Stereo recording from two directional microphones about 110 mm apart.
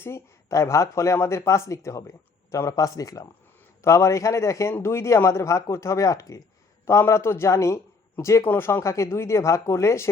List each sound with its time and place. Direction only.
0.0 s speech: 25° left (ahead or behind)